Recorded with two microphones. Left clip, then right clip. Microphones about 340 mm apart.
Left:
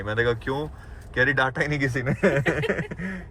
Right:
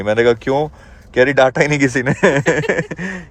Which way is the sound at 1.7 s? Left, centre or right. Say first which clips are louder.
Right 10 dB; right.